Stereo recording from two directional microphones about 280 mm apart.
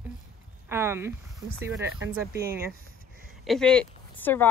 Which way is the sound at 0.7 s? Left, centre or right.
Centre.